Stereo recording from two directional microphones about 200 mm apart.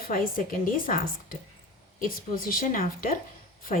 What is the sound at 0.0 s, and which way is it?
Speech, 45° left (ahead or behind).